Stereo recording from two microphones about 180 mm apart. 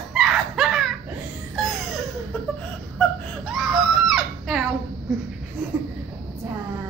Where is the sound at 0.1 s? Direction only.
Centre (ahead or behind).